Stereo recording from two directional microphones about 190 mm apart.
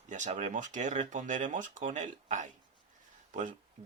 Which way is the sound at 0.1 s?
40° right (ahead or behind).